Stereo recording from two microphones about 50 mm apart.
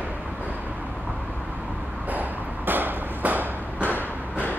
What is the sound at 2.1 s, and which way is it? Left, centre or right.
Ping, right.